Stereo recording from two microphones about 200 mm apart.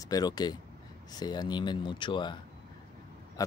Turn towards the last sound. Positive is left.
turn(degrees=15)  # may be behind; listen again after turning